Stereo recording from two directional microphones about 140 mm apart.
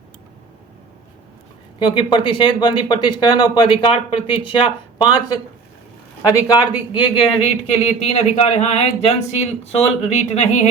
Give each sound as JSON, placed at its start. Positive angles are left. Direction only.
{"t": 1.8, "sound": "speech", "side_deg": 35}